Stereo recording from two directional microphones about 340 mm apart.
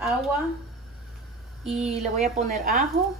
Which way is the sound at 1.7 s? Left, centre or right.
Centre.